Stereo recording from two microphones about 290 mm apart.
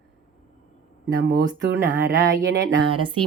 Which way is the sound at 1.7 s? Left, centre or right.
Centre.